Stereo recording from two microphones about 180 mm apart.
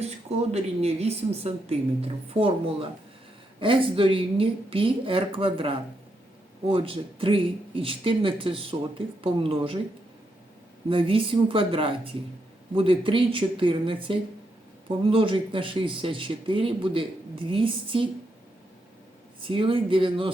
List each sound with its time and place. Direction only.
0.0 s speech: 35° right (ahead or behind)
10.8 s speech: 30° right (ahead or behind)
19.4 s speech: 30° right (ahead or behind)